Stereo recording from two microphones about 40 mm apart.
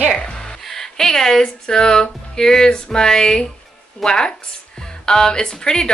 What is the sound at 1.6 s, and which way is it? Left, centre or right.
Speech, centre.